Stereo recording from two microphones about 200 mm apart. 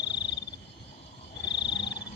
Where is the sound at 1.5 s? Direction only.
60° left (ahead or behind).